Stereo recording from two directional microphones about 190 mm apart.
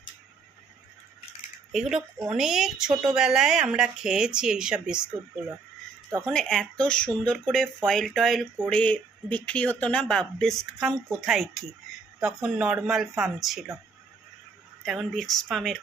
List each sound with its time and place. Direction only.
1.7 s speech: centre (ahead or behind)
6.2 s speech: centre (ahead or behind)
14.8 s speech: centre (ahead or behind)